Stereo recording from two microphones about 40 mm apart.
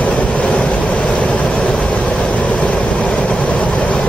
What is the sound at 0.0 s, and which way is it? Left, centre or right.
Vehicle, left.